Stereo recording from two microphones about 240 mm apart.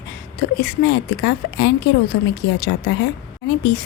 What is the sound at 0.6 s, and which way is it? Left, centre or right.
A woman's voice, left.